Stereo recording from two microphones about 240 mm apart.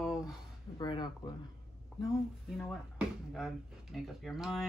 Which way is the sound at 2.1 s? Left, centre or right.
Centre.